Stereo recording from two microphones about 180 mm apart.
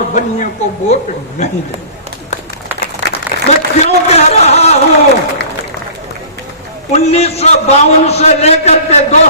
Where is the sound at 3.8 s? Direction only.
40° left (ahead or behind).